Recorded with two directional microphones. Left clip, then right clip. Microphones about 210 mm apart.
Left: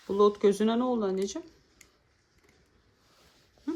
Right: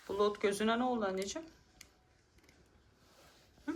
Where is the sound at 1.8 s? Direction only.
Centre (ahead or behind).